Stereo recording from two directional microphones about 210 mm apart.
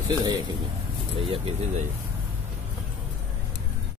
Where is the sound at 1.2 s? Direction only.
25° right (ahead or behind).